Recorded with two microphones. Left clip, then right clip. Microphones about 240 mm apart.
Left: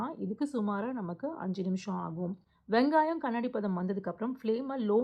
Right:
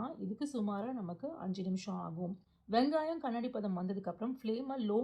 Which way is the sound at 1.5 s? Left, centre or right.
Centre.